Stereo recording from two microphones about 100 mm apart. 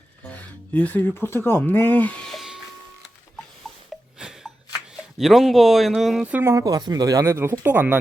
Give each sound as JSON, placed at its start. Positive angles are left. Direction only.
{"t": 0.3, "sound": "speech", "side_deg": 15}
{"t": 2.3, "sound": "music", "side_deg": 0}
{"t": 5.1, "sound": "speech", "side_deg": 0}
{"t": 6.4, "sound": "speech", "side_deg": -30}